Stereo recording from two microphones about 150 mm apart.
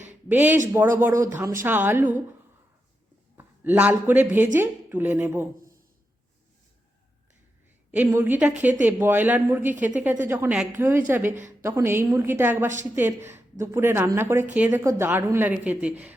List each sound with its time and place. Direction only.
0.1 s a sound: 10° right (ahead or behind)
0.7 s a woman's voice: 15° right (ahead or behind)
3.3 s a woman's voice: 10° right (ahead or behind)
7.9 s a woman's voice: 10° right (ahead or behind)